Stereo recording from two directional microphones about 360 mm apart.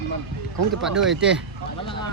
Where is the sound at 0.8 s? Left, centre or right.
Centre.